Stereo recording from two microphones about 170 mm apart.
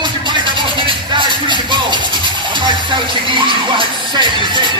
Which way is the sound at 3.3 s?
30° right (ahead or behind).